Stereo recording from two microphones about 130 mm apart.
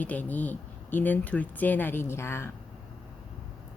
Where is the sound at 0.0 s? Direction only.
10° left (ahead or behind).